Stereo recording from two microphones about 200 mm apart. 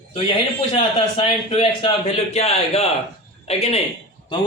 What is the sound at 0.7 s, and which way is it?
A man's voice, 30° left (ahead or behind).